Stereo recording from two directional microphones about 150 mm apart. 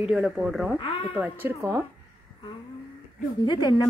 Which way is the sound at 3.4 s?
25° left (ahead or behind).